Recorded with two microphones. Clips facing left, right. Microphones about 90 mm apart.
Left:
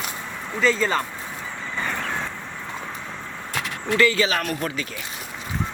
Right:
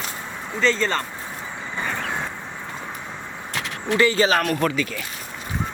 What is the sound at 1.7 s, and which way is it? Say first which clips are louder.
Vehicle: right 1 dB; 10° right (ahead or behind).